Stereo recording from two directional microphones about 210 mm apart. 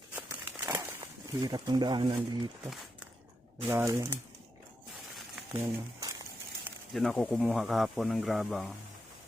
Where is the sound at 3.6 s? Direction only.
10° right (ahead or behind).